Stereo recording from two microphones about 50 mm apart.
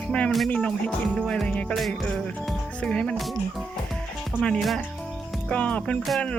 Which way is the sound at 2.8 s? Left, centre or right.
Centre.